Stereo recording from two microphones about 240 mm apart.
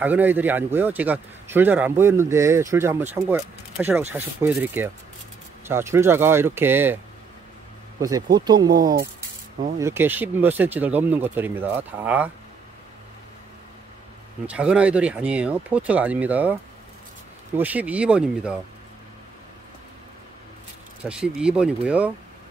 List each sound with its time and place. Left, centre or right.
0.0 s a man's voice: centre
8.0 s a man's voice: centre
8.7 s speech: right
9.8 s a man's voice: centre
14.4 s speech: centre
17.6 s speech: centre
21.0 s speech: centre